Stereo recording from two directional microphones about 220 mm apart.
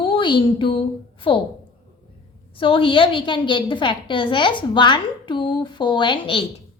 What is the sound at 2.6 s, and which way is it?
A woman's voice, 25° left (ahead or behind).